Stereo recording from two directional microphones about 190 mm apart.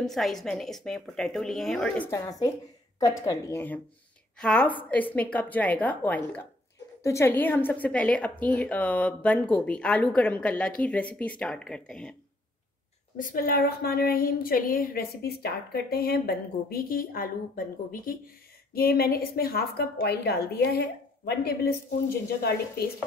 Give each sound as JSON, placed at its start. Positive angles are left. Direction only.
{"t": 0.0, "sound": "a woman's voice", "side_deg": 0}
{"t": 2.0, "sound": "a woman's voice", "side_deg": 15}
{"t": 13.2, "sound": "a woman's voice", "side_deg": 50}